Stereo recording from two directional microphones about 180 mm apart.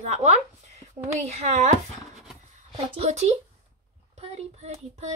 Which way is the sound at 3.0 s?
40° right (ahead or behind).